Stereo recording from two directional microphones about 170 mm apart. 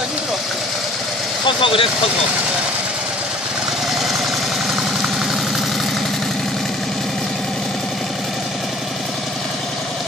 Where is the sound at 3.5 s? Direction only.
Centre (ahead or behind).